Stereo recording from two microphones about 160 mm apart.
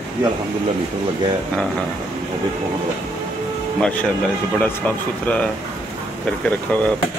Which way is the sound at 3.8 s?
10° left (ahead or behind).